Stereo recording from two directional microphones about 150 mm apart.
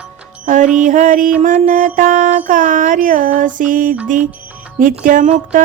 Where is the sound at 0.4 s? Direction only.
55° right (ahead or behind).